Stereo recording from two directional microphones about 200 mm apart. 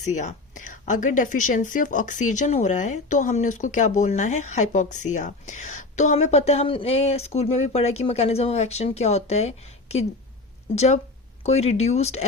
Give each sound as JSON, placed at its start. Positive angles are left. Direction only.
{"t": 0.0, "sound": "a woman's voice", "side_deg": 35}